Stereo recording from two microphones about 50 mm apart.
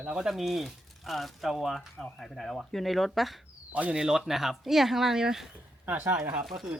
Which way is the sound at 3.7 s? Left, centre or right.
Right.